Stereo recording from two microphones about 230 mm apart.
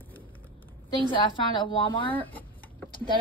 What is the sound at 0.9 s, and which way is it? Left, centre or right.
A woman's voice, left.